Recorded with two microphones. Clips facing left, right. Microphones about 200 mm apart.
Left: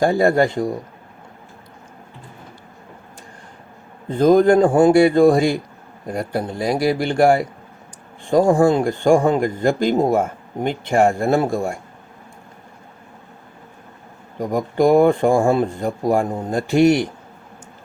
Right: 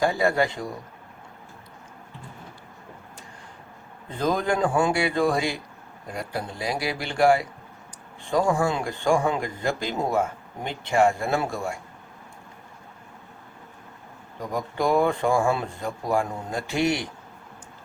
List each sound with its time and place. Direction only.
0.0 s speech: 50° left (ahead or behind)
4.2 s speech: 45° left (ahead or behind)
14.3 s speech: 45° left (ahead or behind)